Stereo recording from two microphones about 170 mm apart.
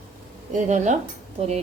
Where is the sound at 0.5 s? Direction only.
45° right (ahead or behind).